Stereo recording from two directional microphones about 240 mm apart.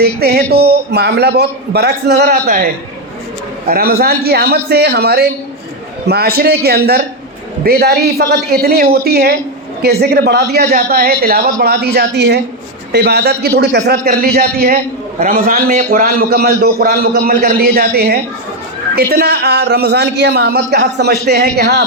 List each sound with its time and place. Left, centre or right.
0.0 s a man's voice: right
3.7 s a man's voice: right